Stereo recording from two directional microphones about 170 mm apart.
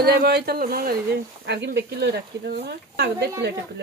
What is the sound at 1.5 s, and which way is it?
Speech, 80° right.